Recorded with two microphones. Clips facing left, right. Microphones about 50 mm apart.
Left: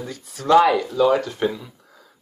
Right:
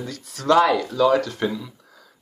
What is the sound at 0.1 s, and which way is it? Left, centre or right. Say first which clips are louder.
Speech: left 2 dB; centre.